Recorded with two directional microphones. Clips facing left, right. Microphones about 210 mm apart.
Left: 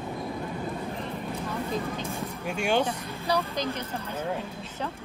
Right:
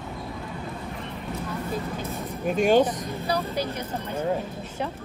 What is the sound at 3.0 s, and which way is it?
Speech, 15° right (ahead or behind).